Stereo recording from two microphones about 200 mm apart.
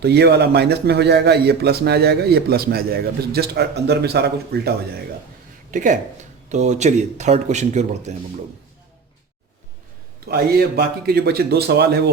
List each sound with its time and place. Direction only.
0.0 s a man's voice: 55° right (ahead or behind)
5.7 s speech: 40° right (ahead or behind)
10.2 s speech: 50° right (ahead or behind)